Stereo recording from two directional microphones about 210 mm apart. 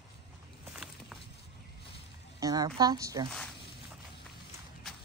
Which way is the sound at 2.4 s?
20° right (ahead or behind).